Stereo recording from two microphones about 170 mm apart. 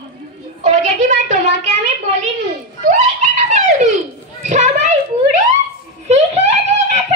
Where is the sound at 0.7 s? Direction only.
45° right (ahead or behind).